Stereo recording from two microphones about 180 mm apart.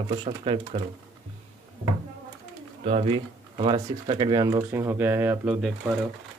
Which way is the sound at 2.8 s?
30° right (ahead or behind).